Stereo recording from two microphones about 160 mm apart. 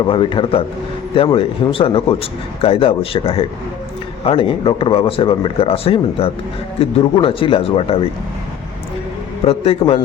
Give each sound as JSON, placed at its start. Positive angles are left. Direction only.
{"t": 0.1, "sound": "speech", "side_deg": 30}
{"t": 9.5, "sound": "speech", "side_deg": 35}